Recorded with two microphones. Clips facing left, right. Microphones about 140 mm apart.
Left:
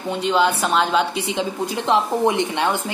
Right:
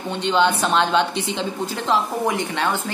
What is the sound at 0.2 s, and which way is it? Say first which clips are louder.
A woman's voice: even; 5° left (ahead or behind).